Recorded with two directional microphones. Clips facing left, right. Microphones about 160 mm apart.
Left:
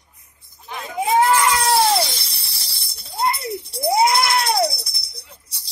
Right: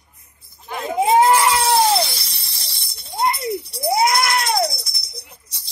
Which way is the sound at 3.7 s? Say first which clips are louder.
Left 2 dB; 25° left (ahead or behind).